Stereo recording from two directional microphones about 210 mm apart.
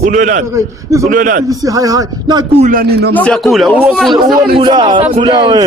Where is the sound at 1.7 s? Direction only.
15° right (ahead or behind).